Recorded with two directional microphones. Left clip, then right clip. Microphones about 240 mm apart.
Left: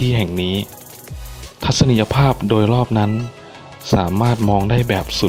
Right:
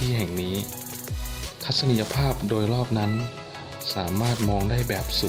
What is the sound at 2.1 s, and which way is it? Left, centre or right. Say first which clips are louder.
Speech: left 10 dB; left.